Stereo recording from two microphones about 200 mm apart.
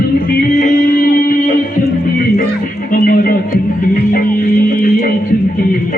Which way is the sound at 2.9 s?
45° left (ahead or behind).